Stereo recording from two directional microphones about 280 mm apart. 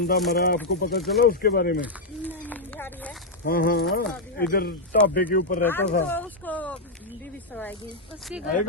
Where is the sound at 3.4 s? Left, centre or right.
Left.